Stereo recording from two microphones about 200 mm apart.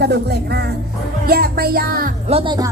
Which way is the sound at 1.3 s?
50° right (ahead or behind).